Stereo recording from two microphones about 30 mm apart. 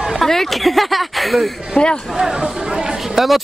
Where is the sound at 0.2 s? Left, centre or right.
Centre.